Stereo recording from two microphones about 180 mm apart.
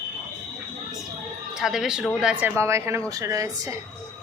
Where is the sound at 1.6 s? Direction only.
Centre (ahead or behind).